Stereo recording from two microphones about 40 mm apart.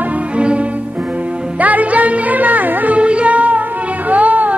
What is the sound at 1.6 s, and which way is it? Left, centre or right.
Music, right.